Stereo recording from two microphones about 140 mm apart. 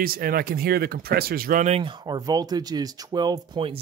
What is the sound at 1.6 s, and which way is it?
Speech, 45° right (ahead or behind).